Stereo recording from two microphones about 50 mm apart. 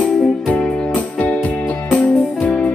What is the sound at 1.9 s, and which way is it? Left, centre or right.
Music, left.